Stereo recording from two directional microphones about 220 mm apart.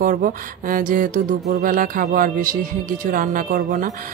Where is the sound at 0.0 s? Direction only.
40° right (ahead or behind).